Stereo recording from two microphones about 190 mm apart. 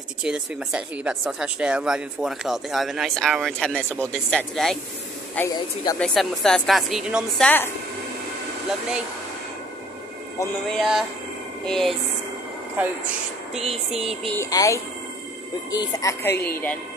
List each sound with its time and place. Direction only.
0.2 s a woman's voice: 5° right (ahead or behind)
7.4 s a woman's voice: 10° left (ahead or behind)
10.8 s speech: centre (ahead or behind)
12.8 s speech: 10° right (ahead or behind)
13.6 s a sound: 30° right (ahead or behind)
14.0 s speech: 5° left (ahead or behind)
14.4 s a woman's voice: 15° left (ahead or behind)